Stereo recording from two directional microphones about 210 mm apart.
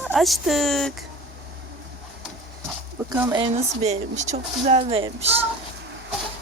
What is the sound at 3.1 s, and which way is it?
Speech, 15° right (ahead or behind).